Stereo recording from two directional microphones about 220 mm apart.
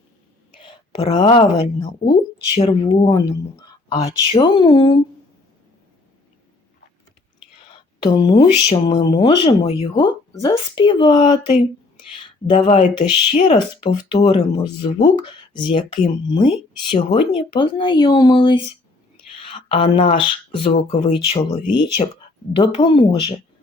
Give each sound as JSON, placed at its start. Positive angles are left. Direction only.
{"t": 0.6, "sound": "a woman's voice", "side_deg": 25}
{"t": 4.3, "sound": "speech", "side_deg": 20}
{"t": 8.0, "sound": "speech", "side_deg": 20}